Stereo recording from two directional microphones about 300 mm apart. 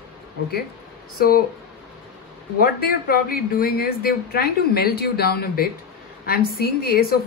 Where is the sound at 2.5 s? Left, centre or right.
Left.